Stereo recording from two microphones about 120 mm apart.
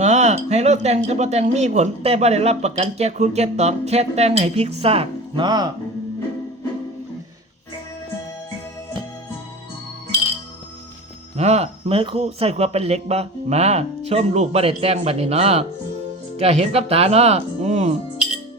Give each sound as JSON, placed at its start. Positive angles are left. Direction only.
{"t": 0.0, "sound": "speech", "side_deg": -70}
{"t": 5.5, "sound": "speech", "side_deg": -35}
{"t": 11.3, "sound": "speech", "side_deg": -65}